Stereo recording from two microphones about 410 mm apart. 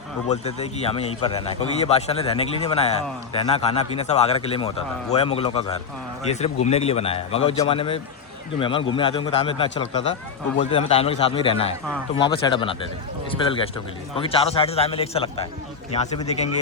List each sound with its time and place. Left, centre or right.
0.3 s speech: centre